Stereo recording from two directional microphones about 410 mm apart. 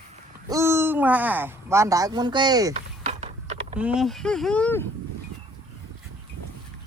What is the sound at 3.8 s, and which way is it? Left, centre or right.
Speech, centre.